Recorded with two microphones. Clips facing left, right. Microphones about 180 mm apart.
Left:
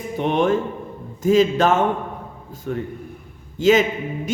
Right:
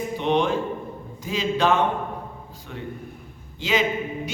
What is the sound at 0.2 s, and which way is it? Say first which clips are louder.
A man's voice: left 4 dB; 50° left (ahead or behind).